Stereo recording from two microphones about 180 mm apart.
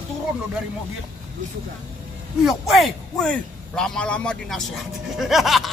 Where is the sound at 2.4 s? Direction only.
Centre (ahead or behind).